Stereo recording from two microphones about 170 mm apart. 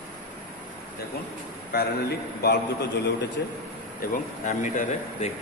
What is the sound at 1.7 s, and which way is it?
Speech, 70° left (ahead or behind).